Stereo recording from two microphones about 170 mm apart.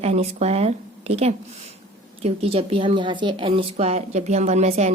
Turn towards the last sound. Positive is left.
turn(degrees=-40)  # may be behind; listen again after turning